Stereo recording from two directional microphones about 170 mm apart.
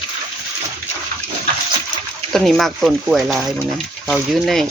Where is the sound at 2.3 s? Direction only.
Centre (ahead or behind).